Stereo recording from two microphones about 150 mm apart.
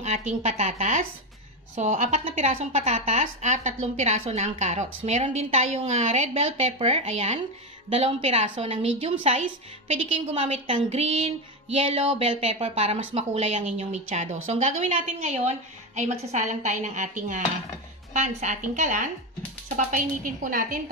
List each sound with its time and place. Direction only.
0.0 s a woman's voice: 50° right (ahead or behind)